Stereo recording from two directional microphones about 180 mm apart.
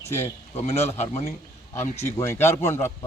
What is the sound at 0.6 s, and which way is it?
Speech, 35° left (ahead or behind).